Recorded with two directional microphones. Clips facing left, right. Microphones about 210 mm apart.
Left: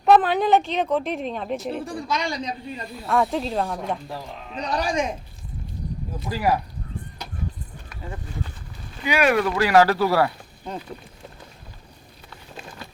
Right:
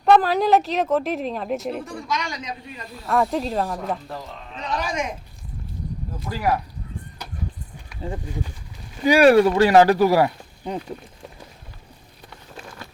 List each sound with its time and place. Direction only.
0.0 s speech: centre (ahead or behind)
1.8 s a man's voice: 30° left (ahead or behind)
3.1 s speech: centre (ahead or behind)
4.5 s a man's voice: 35° left (ahead or behind)
6.3 s speech: 10° left (ahead or behind)
9.0 s speech: 35° right (ahead or behind); by 10.8 s 15° right (ahead or behind)